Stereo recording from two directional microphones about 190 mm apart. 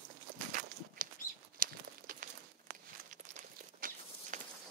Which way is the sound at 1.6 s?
45° right (ahead or behind).